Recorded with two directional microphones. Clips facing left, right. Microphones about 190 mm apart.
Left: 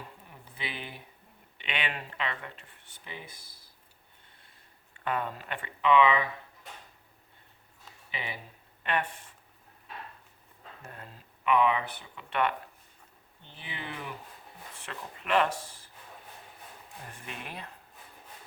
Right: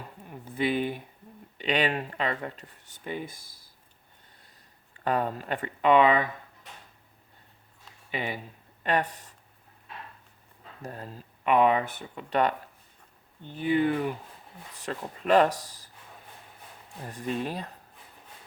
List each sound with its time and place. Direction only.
0.3 s a sound: 45° right (ahead or behind)
1.5 s speech: 40° right (ahead or behind)
5.0 s speech: 40° right (ahead or behind)
8.1 s speech: 45° right (ahead or behind)
10.8 s speech: 35° right (ahead or behind)
13.6 s speech: 45° right (ahead or behind)
17.1 s speech: 35° right (ahead or behind)